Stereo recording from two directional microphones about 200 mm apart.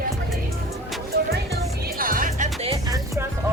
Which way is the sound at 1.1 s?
55° right (ahead or behind).